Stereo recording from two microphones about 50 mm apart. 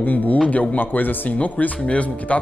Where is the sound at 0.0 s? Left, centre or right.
Left.